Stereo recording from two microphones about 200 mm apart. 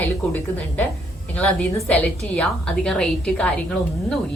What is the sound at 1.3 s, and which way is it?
A woman's voice, 10° left (ahead or behind).